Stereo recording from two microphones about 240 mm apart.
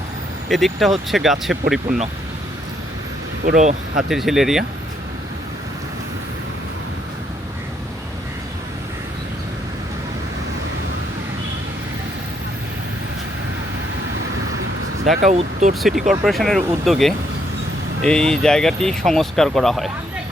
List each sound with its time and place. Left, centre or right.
0.4 s speech: centre
3.4 s speech: right
3.9 s speech: centre
15.1 s speech: right
15.8 s speech: centre